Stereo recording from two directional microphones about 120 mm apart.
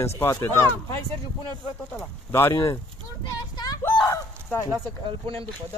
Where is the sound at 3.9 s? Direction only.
30° left (ahead or behind).